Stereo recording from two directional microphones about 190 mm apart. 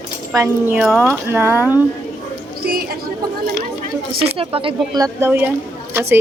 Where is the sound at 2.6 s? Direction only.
50° right (ahead or behind).